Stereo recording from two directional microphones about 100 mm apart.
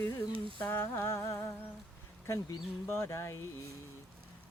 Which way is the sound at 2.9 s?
25° left (ahead or behind).